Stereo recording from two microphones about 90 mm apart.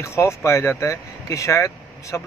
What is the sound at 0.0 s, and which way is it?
Speech, 30° left (ahead or behind).